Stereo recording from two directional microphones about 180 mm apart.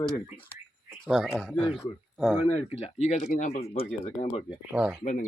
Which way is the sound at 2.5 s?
35° left (ahead or behind).